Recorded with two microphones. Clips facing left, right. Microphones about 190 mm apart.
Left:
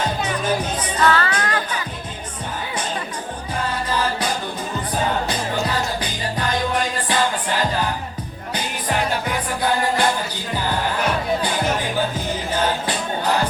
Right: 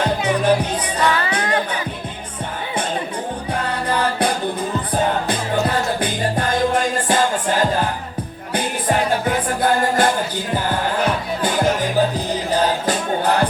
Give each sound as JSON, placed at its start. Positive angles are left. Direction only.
{"t": 0.0, "sound": "music", "side_deg": -65}
{"t": 1.0, "sound": "music", "side_deg": -15}
{"t": 3.5, "sound": "music", "side_deg": -65}
{"t": 5.3, "sound": "music", "side_deg": -55}
{"t": 11.4, "sound": "music", "side_deg": -40}